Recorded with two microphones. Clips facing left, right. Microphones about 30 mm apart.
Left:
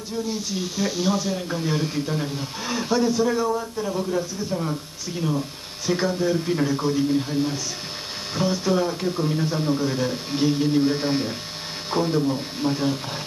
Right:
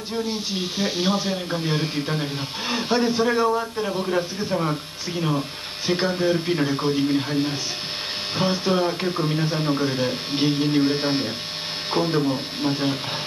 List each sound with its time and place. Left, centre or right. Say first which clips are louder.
0.1 s a man's voice: right 1 dB; right